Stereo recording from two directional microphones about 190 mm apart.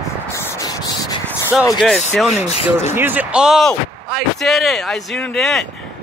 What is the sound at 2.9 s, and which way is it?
Speech, 10° right (ahead or behind).